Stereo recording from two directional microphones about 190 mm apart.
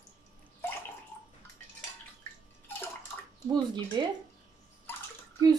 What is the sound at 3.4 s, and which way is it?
Speech, 20° right (ahead or behind).